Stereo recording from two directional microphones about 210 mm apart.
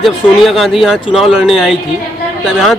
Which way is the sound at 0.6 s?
Centre (ahead or behind).